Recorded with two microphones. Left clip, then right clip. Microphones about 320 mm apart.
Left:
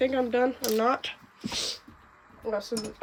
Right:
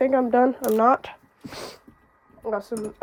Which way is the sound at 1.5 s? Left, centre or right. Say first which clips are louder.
Left 5 dB; centre.